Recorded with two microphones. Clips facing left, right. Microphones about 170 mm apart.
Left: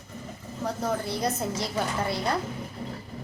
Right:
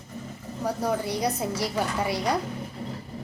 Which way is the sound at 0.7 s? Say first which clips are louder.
Right 2 dB; 10° right (ahead or behind).